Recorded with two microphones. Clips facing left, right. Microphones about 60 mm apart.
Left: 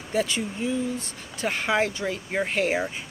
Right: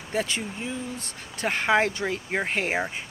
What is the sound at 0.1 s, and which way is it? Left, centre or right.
Speech, right.